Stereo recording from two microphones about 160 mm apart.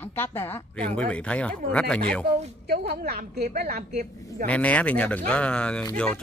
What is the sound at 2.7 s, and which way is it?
A woman's voice, 75° right (ahead or behind).